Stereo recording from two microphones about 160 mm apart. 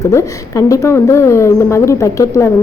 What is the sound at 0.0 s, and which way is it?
A woman's voice, 20° left (ahead or behind).